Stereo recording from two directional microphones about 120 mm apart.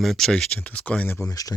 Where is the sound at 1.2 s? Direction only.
30° left (ahead or behind).